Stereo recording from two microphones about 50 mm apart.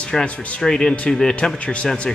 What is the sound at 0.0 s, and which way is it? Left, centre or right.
A man's voice, left.